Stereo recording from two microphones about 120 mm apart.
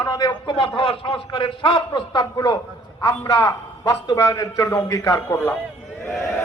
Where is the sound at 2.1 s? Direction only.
35° left (ahead or behind).